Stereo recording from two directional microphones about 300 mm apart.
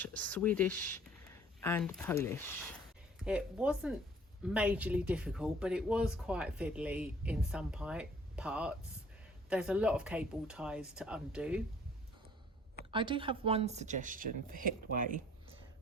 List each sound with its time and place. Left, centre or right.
0.0 s speech: centre
3.2 s speech: centre
12.9 s speech: centre